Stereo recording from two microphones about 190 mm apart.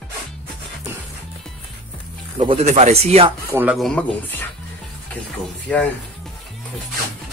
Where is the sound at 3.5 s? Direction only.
5° right (ahead or behind).